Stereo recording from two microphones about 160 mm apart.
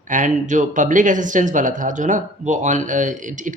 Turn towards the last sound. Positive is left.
turn(degrees=-50)  # may be behind; listen again after turning